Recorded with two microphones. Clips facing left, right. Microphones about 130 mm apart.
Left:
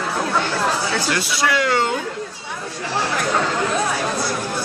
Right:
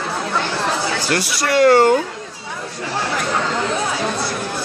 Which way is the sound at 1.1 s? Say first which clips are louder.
Right 7 dB; 50° right (ahead or behind).